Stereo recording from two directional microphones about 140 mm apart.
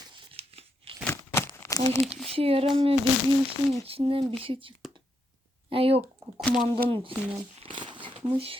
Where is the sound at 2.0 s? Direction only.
Centre (ahead or behind).